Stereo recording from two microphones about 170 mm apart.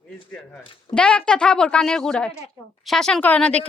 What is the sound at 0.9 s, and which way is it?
A woman's voice, 5° left (ahead or behind).